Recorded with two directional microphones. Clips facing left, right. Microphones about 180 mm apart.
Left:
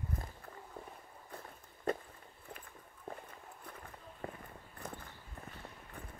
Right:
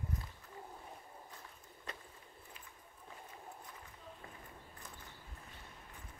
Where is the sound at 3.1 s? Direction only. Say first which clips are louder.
Left 9 dB; 50° left (ahead or behind).